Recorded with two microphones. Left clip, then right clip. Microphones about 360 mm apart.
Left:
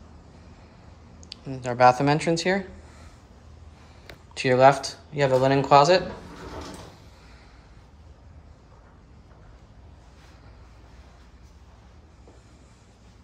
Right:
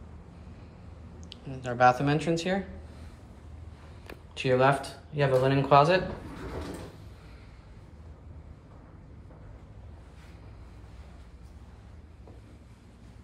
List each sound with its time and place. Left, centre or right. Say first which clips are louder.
1.2 s speech: left 5 dB; centre
4.3 s speech: left 7 dB; centre